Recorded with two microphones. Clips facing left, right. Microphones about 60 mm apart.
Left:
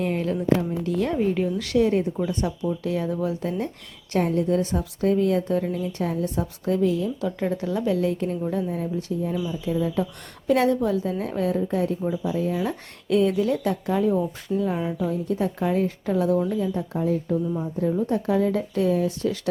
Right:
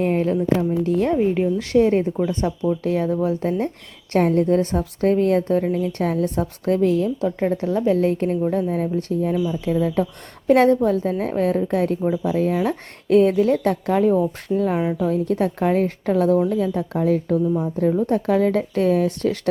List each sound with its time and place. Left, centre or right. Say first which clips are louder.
0.0 s speech: right 5 dB; right
1.1 s speech: right 4 dB; right
4.1 s a woman's voice: right 5 dB; right
7.3 s a woman's voice: right 5 dB; right
12.5 s a woman's voice: right 5 dB; right
16.6 s speech: right 4 dB; right
17.6 s speech: right 4 dB; right